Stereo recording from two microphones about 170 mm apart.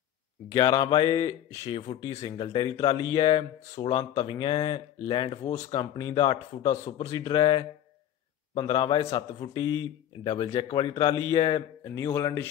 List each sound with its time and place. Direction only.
0.6 s mantra: 30° left (ahead or behind)
1.2 s speech: 15° left (ahead or behind)
1.7 s mantra: 35° left (ahead or behind)
2.2 s speech: 20° left (ahead or behind)
3.7 s mantra: 35° left (ahead or behind)
4.3 s speech: 30° left (ahead or behind)
6.8 s speech: 20° left (ahead or behind)